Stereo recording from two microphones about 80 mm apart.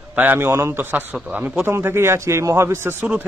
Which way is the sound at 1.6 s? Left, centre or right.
Right.